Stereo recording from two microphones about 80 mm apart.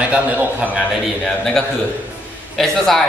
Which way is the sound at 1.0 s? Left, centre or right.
Centre.